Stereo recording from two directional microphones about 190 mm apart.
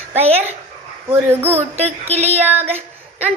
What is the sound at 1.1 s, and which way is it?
Speech, 10° right (ahead or behind).